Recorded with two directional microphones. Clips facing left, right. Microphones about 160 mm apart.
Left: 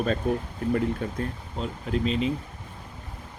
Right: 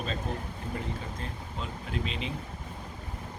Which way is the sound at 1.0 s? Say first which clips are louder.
Left 9 dB; 55° left (ahead or behind).